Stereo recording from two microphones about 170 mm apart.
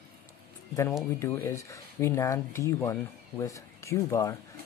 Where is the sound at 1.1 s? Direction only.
15° left (ahead or behind).